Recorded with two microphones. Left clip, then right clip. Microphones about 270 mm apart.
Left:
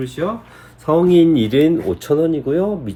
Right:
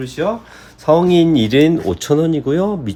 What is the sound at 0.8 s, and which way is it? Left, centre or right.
Speech, right.